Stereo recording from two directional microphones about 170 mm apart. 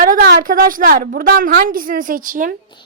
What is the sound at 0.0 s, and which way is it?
A woman's voice, 65° right (ahead or behind).